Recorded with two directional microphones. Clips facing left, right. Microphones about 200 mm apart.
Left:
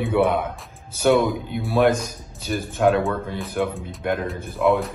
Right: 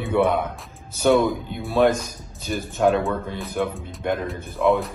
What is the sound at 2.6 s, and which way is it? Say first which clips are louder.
Speech: left 1 dB; 50° left (ahead or behind).